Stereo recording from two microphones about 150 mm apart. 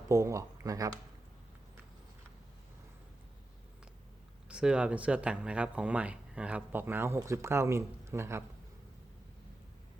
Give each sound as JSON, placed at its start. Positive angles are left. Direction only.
{"t": 0.1, "sound": "speech", "side_deg": -20}
{"t": 4.4, "sound": "speech", "side_deg": -5}